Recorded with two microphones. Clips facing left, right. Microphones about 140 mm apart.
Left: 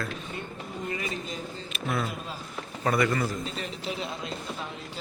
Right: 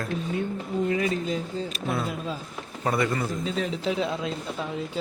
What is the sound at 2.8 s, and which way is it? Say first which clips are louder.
Speech: even; 25° right (ahead or behind).